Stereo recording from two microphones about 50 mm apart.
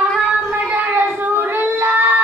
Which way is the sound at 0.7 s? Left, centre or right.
Right.